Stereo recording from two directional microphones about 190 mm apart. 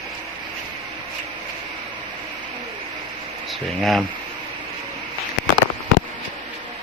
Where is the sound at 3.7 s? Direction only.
Centre (ahead or behind).